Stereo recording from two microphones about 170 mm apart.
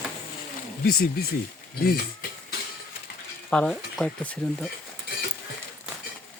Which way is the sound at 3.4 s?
5° left (ahead or behind).